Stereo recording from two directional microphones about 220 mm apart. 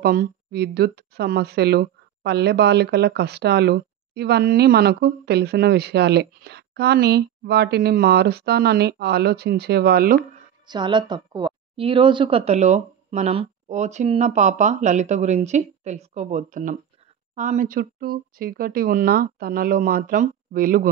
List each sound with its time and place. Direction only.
0.0 s speech: 40° right (ahead or behind)
10.7 s a woman's voice: 20° right (ahead or behind); by 20.9 s 40° right (ahead or behind)